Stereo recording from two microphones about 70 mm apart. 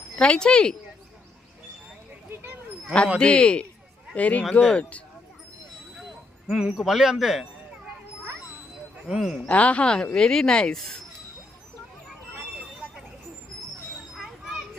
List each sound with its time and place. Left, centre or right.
0.2 s speech: centre
2.3 s a sound: right
3.2 s speech: centre
6.5 s speech: centre
9.0 s speech: centre
9.5 s speech: centre
14.2 s children playing: centre